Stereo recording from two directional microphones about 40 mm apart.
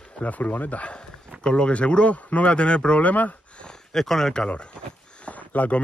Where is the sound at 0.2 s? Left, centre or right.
Left.